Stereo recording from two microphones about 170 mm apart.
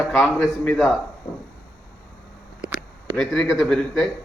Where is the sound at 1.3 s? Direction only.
25° left (ahead or behind).